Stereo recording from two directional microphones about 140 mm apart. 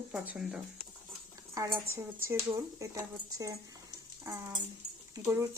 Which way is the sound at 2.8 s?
25° right (ahead or behind).